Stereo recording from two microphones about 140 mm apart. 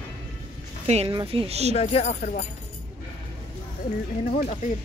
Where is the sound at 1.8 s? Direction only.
50° left (ahead or behind); by 2.4 s 65° left (ahead or behind).